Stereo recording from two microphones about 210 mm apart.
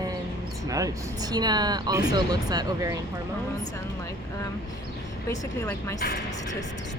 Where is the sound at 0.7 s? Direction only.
15° right (ahead or behind).